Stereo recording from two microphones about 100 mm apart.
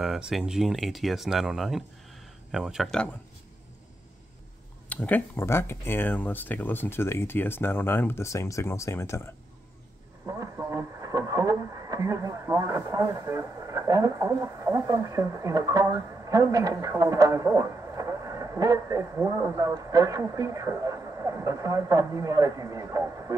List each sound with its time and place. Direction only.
0.0 s speech: 5° right (ahead or behind)
4.8 s speech: 15° left (ahead or behind)
10.2 s speech: 35° right (ahead or behind)